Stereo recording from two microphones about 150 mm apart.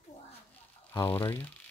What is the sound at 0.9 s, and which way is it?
Speech, 15° left (ahead or behind).